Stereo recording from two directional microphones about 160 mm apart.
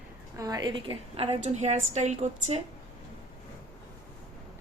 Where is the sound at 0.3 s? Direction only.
25° right (ahead or behind); by 2.6 s 45° right (ahead or behind).